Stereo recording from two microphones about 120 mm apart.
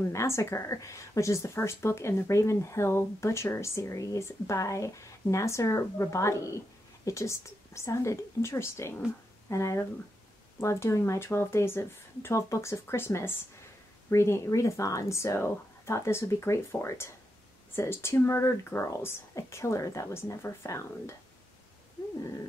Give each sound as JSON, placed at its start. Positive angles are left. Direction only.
{"t": 0.0, "sound": "a woman's voice", "side_deg": 25}